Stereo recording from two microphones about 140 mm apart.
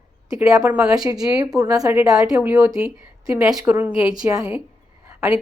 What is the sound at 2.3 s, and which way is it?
Speech, 10° right (ahead or behind).